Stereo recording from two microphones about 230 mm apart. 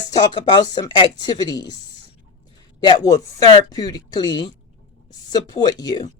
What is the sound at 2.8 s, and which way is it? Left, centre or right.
Speech, centre.